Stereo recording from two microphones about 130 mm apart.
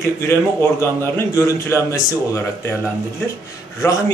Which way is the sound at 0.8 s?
20° left (ahead or behind).